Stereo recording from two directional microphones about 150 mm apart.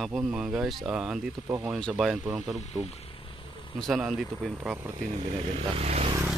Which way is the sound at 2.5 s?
45° left (ahead or behind).